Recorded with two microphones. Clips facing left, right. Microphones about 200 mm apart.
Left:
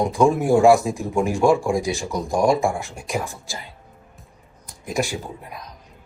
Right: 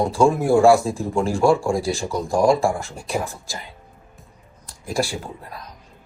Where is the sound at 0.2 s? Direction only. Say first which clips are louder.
Even; 15° left (ahead or behind).